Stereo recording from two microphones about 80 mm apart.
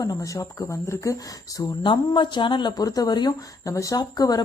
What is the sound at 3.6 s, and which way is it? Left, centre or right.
Speech, left.